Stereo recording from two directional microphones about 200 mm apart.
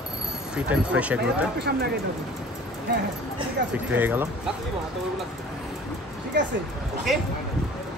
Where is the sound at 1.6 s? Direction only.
55° right (ahead or behind).